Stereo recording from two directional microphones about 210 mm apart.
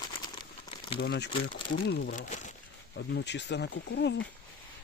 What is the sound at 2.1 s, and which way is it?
Speech, 35° left (ahead or behind).